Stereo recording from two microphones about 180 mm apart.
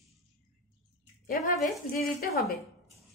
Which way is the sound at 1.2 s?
50° left (ahead or behind).